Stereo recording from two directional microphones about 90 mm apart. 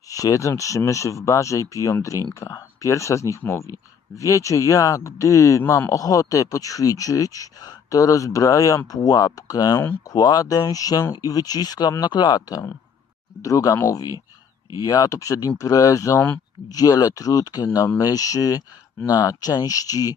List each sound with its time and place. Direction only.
0.1 s speech: 40° left (ahead or behind)
5.6 s speech: 25° left (ahead or behind)
5.9 s speech: 40° left (ahead or behind)
13.4 s speech: 40° left (ahead or behind)
16.1 s speech: 20° left (ahead or behind)
16.6 s speech: 45° left (ahead or behind)